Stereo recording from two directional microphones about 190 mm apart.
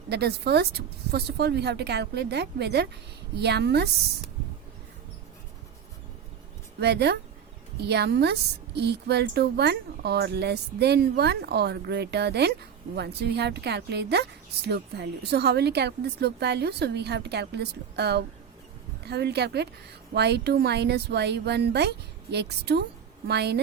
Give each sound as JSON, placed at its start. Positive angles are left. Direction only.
{"t": 0.1, "sound": "a woman's voice", "side_deg": -60}
{"t": 6.7, "sound": "a woman's voice", "side_deg": -60}